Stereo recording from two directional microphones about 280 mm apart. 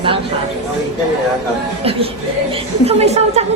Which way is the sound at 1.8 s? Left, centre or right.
Right.